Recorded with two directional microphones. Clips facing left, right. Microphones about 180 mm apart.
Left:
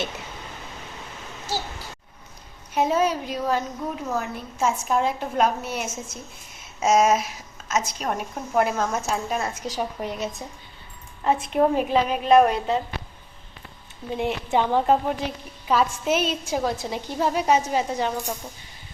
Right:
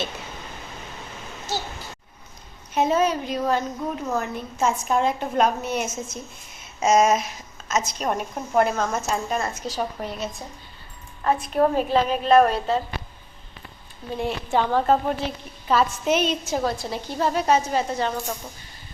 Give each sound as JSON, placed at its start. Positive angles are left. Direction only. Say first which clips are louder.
{"t": 2.7, "sound": "a woman's voice", "louder": "right 1 dB", "side_deg": 10}
{"t": 9.6, "sound": "a woman's voice", "louder": "even", "side_deg": 15}
{"t": 14.2, "sound": "a woman's voice", "louder": "even", "side_deg": 20}